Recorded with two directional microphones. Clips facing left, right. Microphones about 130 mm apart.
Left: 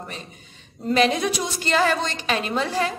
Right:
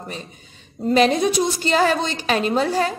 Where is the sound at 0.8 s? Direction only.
35° right (ahead or behind).